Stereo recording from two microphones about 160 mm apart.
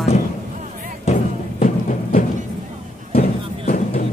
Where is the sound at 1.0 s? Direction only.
50° left (ahead or behind).